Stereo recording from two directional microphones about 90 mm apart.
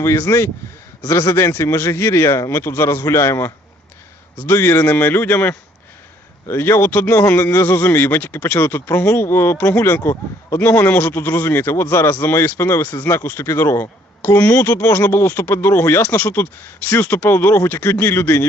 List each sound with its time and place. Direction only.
0.0 s speech: 30° left (ahead or behind)
14.2 s speech: 20° left (ahead or behind)
17.2 s speech: 25° left (ahead or behind)